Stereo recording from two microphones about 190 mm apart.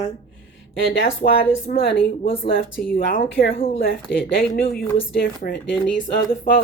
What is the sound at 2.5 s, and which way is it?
Speech, 50° left (ahead or behind).